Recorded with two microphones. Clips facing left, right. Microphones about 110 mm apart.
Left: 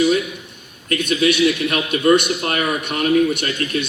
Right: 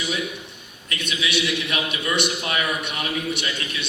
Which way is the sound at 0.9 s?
50° left (ahead or behind).